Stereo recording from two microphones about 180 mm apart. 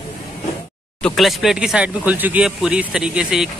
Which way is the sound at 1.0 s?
Centre (ahead or behind).